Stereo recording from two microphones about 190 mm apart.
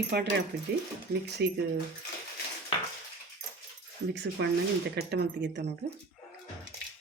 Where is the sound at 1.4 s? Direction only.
60° right (ahead or behind).